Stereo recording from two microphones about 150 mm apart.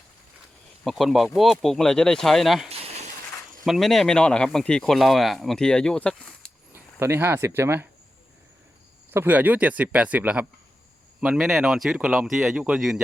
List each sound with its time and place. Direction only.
0.9 s speech: centre (ahead or behind)
3.7 s speech: centre (ahead or behind)
6.7 s speech: 15° right (ahead or behind)
9.1 s speech: 10° right (ahead or behind)